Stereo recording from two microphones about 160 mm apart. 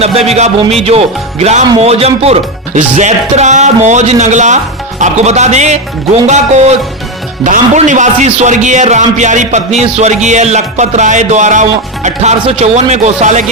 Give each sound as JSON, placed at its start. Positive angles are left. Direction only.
{"t": 0.0, "sound": "a man's voice", "side_deg": -40}